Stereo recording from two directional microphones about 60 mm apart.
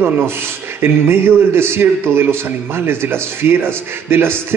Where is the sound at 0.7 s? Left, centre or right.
Right.